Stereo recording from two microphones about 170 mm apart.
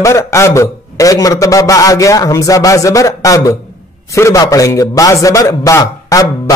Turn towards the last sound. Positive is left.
turn(degrees=20)  # may be behind; listen again after turning